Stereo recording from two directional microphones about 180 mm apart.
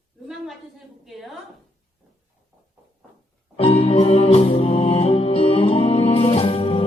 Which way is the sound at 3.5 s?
30° left (ahead or behind).